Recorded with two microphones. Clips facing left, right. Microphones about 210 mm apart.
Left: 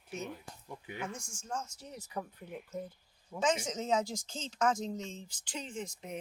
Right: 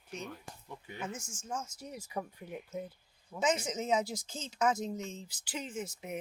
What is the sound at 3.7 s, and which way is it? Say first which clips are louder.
Speech: even; 10° right (ahead or behind).